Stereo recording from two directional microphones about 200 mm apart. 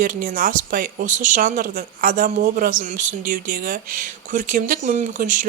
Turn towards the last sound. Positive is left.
turn(degrees=-40)  # may be behind; listen again after turning